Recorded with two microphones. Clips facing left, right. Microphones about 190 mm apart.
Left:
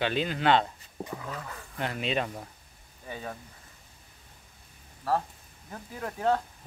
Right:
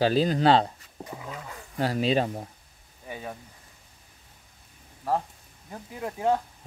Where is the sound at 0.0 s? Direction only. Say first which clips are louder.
Right 6 dB; 35° right (ahead or behind).